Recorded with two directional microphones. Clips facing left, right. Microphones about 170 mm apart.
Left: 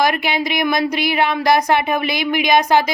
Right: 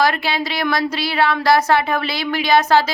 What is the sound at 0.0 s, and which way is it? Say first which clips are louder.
Speech: left 1 dB; 15° left (ahead or behind).